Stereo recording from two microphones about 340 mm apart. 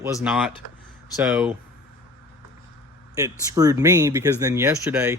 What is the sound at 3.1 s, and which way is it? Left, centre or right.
Speech, centre.